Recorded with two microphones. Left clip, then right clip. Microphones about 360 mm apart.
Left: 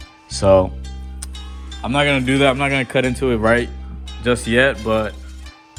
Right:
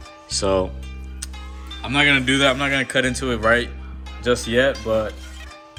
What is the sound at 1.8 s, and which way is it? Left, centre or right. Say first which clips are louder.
Speech: even; centre.